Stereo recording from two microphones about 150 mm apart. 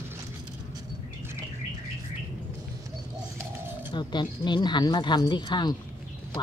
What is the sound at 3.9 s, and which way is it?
Speech, 30° left (ahead or behind).